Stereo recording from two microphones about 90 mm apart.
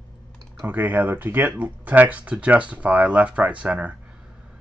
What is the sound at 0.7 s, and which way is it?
Speech, 20° right (ahead or behind).